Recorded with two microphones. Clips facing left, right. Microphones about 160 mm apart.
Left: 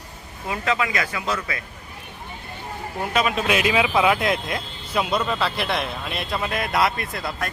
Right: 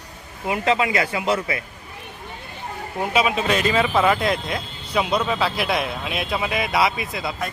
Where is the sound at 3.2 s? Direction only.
Centre (ahead or behind).